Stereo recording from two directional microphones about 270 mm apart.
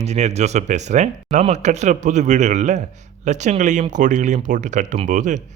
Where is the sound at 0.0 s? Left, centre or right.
Right.